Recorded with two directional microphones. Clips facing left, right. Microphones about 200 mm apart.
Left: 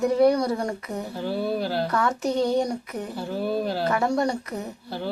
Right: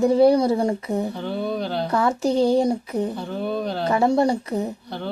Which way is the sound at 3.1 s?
5° left (ahead or behind).